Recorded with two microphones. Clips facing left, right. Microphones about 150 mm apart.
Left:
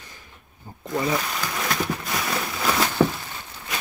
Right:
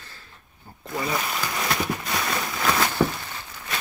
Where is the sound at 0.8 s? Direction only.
Centre (ahead or behind).